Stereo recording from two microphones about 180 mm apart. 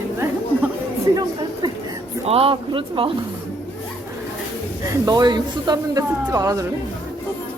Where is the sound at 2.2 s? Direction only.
30° right (ahead or behind).